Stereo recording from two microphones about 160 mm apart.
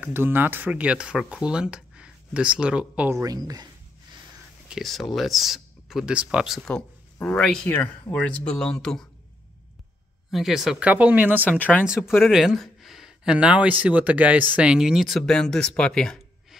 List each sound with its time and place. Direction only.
0.0 s speech: 15° right (ahead or behind)
3.2 s speech: 25° right (ahead or behind)
4.6 s speech: centre (ahead or behind)
10.3 s speech: centre (ahead or behind)
11.5 s speech: 10° left (ahead or behind)
12.1 s speech: centre (ahead or behind)